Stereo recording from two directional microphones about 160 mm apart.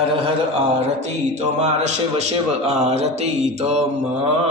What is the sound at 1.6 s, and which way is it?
A man's voice, 45° right (ahead or behind).